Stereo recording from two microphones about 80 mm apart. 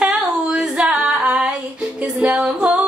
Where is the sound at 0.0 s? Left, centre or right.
Centre.